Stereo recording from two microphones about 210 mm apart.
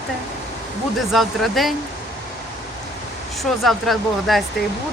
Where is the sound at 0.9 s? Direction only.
Centre (ahead or behind).